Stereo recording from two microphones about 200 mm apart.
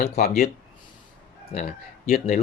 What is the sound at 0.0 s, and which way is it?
Speech, 50° left (ahead or behind).